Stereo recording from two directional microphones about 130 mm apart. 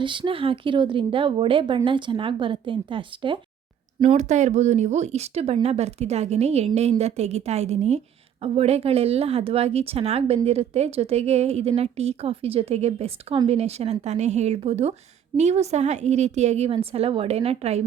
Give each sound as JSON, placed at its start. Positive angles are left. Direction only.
{"t": 0.0, "sound": "speech", "side_deg": -40}
{"t": 4.2, "sound": "a woman's voice", "side_deg": -65}